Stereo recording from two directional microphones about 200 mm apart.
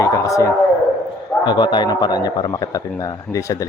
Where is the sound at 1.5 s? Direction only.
20° left (ahead or behind).